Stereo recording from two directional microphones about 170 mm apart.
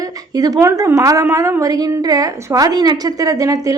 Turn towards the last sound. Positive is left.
turn(degrees=-20)  # may be behind; listen again after turning